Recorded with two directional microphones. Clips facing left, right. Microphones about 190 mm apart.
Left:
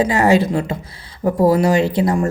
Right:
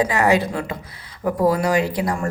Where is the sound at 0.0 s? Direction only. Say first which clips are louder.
Left 4 dB; 25° left (ahead or behind).